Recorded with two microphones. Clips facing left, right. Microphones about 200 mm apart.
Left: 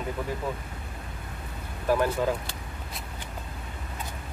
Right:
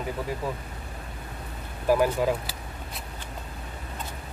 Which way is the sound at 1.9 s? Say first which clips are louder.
Right 1 dB; 10° right (ahead or behind).